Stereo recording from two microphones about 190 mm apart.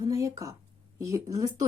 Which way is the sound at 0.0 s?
15° right (ahead or behind).